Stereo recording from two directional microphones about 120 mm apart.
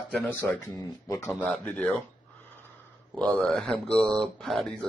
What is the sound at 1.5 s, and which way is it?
Speech, 5° left (ahead or behind).